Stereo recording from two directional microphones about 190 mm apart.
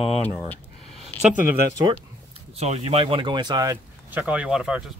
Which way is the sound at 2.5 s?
35° right (ahead or behind).